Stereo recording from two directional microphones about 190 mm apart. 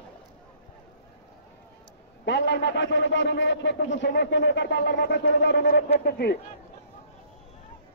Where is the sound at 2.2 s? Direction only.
65° left (ahead or behind).